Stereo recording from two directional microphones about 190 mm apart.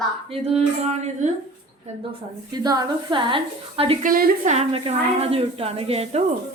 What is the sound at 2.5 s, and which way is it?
Speech, 20° right (ahead or behind).